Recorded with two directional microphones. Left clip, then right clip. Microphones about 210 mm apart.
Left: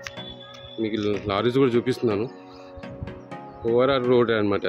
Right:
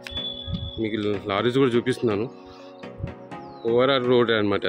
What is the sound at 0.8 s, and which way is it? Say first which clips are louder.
Speech: left 1 dB; 5° left (ahead or behind).